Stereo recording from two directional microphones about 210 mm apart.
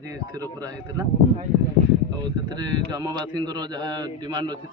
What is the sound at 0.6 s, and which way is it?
Speech, 15° right (ahead or behind).